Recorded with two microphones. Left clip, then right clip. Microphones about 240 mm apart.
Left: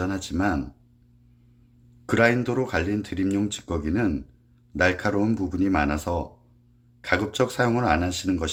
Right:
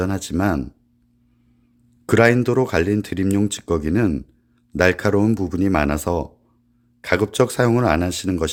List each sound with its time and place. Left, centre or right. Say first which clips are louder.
0.0 s speech: right 4 dB; right
2.0 s speech: right 6 dB; right